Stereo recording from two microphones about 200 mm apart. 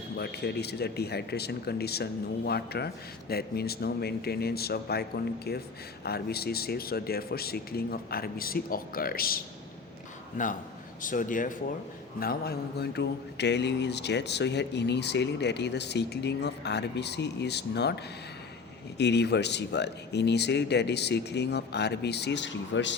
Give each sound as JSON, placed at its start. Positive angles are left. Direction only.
{"t": 0.2, "sound": "speech", "side_deg": 55}